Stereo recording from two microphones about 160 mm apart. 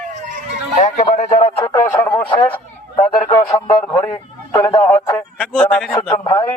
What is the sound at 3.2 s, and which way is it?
A man's voice, 25° left (ahead or behind).